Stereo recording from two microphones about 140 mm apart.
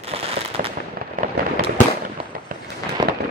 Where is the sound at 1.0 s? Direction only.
75° right (ahead or behind).